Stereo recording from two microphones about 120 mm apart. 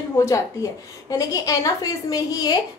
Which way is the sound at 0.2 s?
25° left (ahead or behind).